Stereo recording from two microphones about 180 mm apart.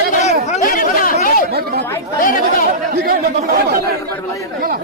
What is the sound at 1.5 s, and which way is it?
Chatter, 65° right (ahead or behind).